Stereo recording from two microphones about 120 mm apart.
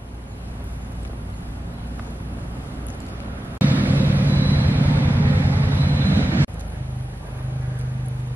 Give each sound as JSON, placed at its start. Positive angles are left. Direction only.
{"t": 3.5, "sound": "vehicle", "side_deg": -15}